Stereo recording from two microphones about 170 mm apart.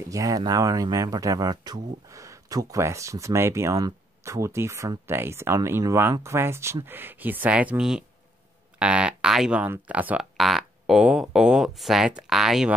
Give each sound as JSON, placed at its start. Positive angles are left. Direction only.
{"t": 0.1, "sound": "speech", "side_deg": -20}